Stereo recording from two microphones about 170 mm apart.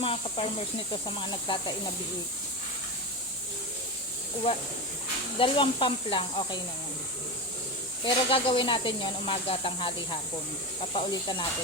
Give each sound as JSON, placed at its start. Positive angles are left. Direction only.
{"t": 0.0, "sound": "speech", "side_deg": 35}
{"t": 5.4, "sound": "speech", "side_deg": 30}
{"t": 8.0, "sound": "speech", "side_deg": 30}